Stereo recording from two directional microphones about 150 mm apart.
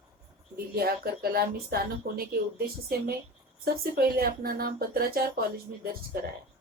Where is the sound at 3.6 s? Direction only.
90° right.